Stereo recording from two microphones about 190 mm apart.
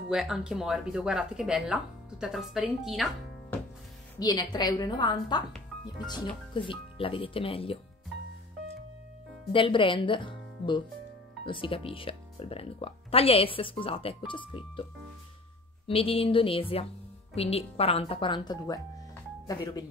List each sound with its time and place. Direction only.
0.1 s speech: 5° right (ahead or behind)
4.2 s speech: 20° left (ahead or behind)
9.5 s speech: 25° left (ahead or behind)
15.9 s speech: 30° left (ahead or behind)